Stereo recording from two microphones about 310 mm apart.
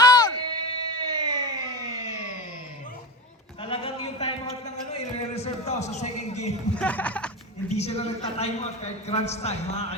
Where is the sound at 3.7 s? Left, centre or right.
Centre.